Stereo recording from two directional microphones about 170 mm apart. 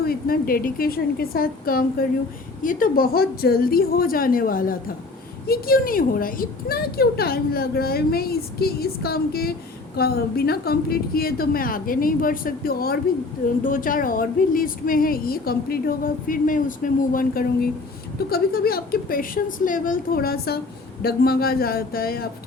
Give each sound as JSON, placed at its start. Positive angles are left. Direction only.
{"t": 0.0, "sound": "a woman's voice", "side_deg": 60}